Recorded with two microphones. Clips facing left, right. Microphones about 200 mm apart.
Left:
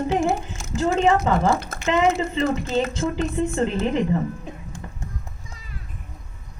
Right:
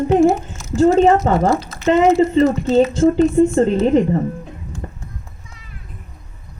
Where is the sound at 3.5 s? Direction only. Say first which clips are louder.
Right 8 dB; 45° right (ahead or behind).